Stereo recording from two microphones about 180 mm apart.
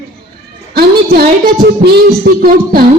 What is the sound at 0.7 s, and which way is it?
Speech, 60° right (ahead or behind).